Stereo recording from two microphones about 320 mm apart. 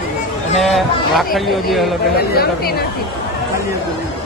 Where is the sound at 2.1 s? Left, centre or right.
Left.